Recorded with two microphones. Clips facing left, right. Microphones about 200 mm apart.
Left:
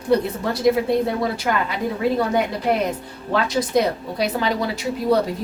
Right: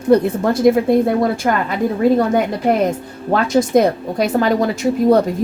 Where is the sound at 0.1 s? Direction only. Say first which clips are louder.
Right 6 dB; 50° right (ahead or behind).